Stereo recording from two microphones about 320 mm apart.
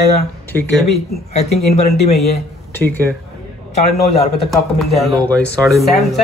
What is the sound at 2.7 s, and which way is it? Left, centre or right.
Speech, centre.